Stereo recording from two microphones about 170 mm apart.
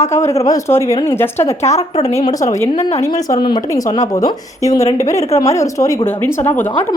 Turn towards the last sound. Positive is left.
turn(degrees=10)  # may be behind; listen again after turning